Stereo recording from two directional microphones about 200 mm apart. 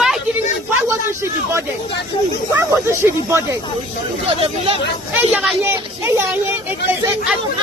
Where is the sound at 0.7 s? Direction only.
15° right (ahead or behind).